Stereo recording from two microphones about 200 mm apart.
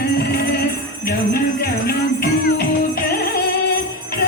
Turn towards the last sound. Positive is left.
turn(degrees=50)  # may be behind; listen again after turning